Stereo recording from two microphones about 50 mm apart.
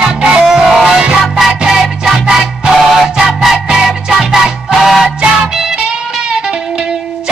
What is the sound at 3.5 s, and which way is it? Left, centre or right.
Music, centre.